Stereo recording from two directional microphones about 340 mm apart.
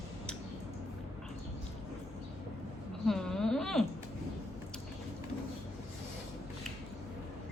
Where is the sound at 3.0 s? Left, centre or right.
Centre.